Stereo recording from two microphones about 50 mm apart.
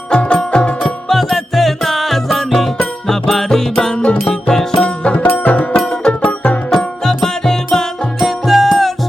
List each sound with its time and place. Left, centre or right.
0.1 s music: centre
1.0 s music: centre; by 5.2 s left
5.2 s music: left
6.7 s music: centre
8.2 s music: centre